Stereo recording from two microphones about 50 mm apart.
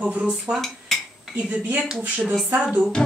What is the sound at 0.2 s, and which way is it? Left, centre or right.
Speech, centre.